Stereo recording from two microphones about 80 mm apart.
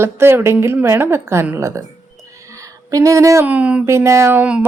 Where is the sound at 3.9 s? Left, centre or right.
Right.